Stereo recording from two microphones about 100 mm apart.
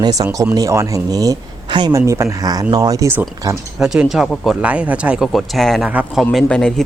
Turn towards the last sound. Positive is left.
turn(degrees=5)  # may be behind; listen again after turning